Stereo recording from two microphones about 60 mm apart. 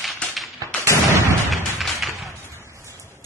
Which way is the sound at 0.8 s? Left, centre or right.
Right.